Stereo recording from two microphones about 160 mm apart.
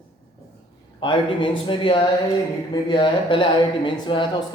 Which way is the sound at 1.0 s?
30° left (ahead or behind).